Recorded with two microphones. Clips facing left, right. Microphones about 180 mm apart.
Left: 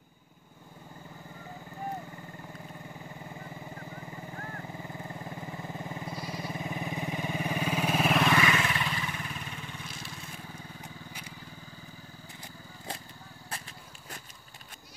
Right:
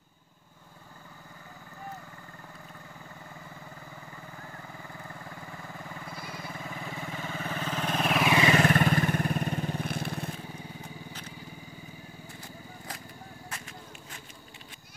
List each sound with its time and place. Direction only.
4.7 s sheep: 20° left (ahead or behind); by 8.3 s centre (ahead or behind)
8.5 s vehicle: 45° right (ahead or behind)
9.8 s vehicle: 60° right (ahead or behind)
13.5 s a sound: 35° left (ahead or behind)